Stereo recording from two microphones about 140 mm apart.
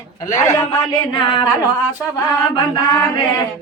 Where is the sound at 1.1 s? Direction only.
35° left (ahead or behind).